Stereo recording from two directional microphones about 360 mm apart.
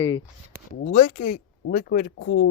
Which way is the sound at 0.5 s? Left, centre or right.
Right.